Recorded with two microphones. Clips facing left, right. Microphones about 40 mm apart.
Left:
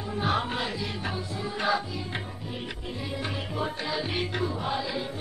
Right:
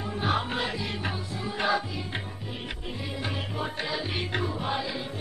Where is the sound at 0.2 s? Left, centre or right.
Centre.